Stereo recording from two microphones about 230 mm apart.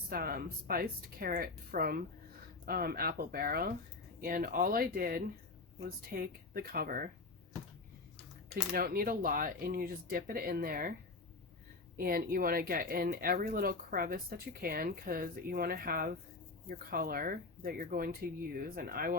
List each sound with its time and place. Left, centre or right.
0.1 s speech: right
8.7 s speech: right
11.9 s speech: right